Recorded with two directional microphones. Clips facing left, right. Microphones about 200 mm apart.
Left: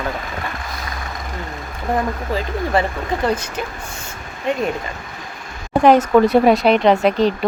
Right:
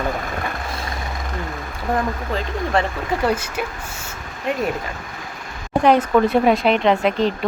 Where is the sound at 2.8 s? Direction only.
5° left (ahead or behind).